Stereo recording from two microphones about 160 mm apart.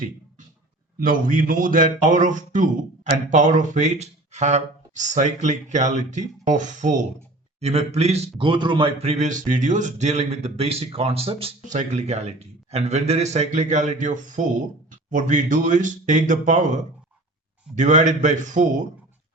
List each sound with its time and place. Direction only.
0.9 s a man's voice: 60° right (ahead or behind); by 11.5 s 35° right (ahead or behind)
11.6 s speech: 50° right (ahead or behind)